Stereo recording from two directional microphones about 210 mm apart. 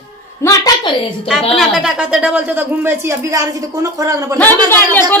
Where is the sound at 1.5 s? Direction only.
Centre (ahead or behind).